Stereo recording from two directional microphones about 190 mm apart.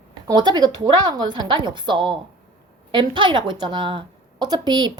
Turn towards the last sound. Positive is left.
turn(degrees=-20)  # may be behind; listen again after turning